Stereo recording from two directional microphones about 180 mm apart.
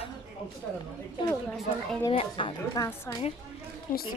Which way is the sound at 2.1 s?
30° left (ahead or behind).